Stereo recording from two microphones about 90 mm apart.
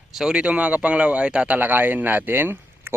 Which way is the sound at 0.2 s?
10° right (ahead or behind).